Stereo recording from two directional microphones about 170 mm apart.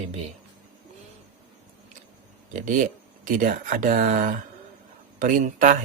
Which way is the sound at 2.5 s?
50° right (ahead or behind).